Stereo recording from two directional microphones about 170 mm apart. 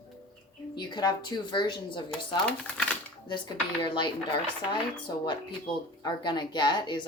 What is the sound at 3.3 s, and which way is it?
Speech, 25° left (ahead or behind).